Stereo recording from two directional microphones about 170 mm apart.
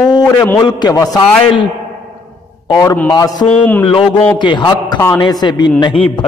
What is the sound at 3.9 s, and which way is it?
A man's voice, 30° left (ahead or behind).